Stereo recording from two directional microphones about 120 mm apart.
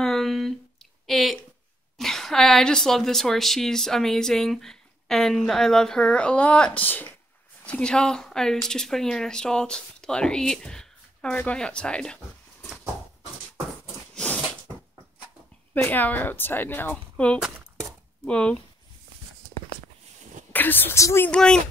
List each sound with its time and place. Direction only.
0.0 s a sound: centre (ahead or behind)
1.0 s a woman's voice: centre (ahead or behind)
14.1 s a sound: 10° left (ahead or behind)
15.7 s speech: 15° left (ahead or behind)
20.5 s speech: 15° left (ahead or behind)
21.3 s speech: 5° left (ahead or behind)